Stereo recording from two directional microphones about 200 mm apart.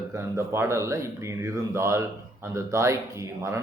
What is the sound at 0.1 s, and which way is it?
A man's voice, 15° right (ahead or behind).